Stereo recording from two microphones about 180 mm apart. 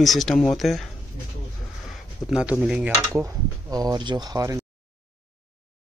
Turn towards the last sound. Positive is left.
turn(degrees=-20)  # may be behind; listen again after turning